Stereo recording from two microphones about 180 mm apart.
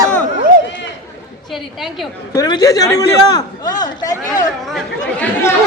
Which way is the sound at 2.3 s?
20° left (ahead or behind).